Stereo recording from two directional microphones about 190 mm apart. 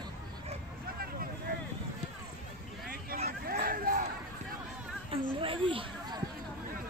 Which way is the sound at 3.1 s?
50° right (ahead or behind).